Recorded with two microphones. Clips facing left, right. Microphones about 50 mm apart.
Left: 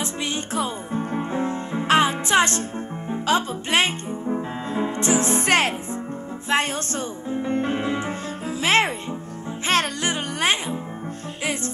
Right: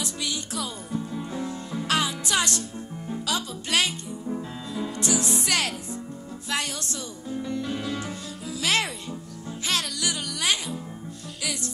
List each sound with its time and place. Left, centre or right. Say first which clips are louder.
0.0 s music: left 4 dB; left